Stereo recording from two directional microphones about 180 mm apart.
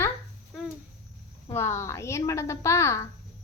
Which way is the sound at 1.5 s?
15° left (ahead or behind).